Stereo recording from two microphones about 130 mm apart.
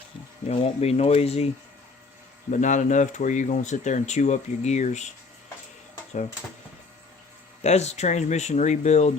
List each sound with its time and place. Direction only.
0.4 s speech: 55° left (ahead or behind)
2.5 s speech: 70° left (ahead or behind)
7.6 s speech: 60° left (ahead or behind)